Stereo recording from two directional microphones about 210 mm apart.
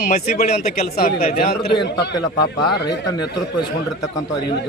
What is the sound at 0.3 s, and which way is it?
A man's voice, 45° left (ahead or behind).